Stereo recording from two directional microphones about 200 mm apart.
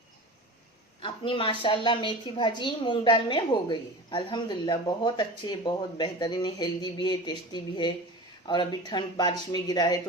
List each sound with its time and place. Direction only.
1.0 s a woman's voice: 25° left (ahead or behind)